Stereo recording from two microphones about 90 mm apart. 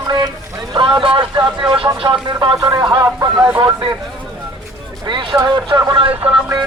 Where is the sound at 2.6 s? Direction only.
40° right (ahead or behind).